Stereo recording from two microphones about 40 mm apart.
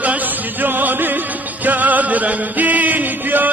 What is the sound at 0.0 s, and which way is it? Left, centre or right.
Music, right.